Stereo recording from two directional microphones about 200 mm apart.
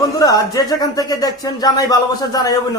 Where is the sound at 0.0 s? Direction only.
20° left (ahead or behind).